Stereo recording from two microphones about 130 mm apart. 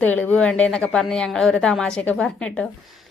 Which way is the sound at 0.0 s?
15° left (ahead or behind).